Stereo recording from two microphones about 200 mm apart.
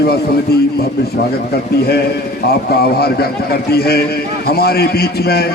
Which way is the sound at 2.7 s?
50° left (ahead or behind).